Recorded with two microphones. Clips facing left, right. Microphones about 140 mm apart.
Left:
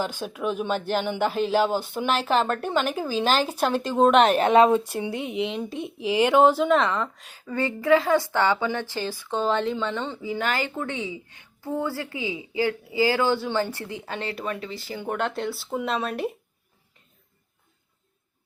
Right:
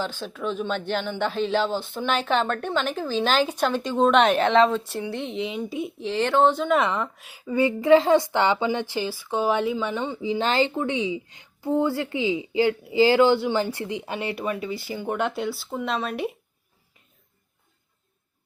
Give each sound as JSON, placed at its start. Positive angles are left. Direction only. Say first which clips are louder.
{"t": 0.0, "sound": "speech", "louder": "left 1 dB", "side_deg": 10}
{"t": 4.5, "sound": "speech", "louder": "left 2 dB", "side_deg": 15}
{"t": 5.5, "sound": "speech", "louder": "right 1 dB", "side_deg": -5}
{"t": 6.0, "sound": "speech", "louder": "left 3 dB", "side_deg": 10}
{"t": 6.7, "sound": "a woman's voice", "louder": "even", "side_deg": -10}
{"t": 7.9, "sound": "a woman's voice", "louder": "right 3 dB", "side_deg": -25}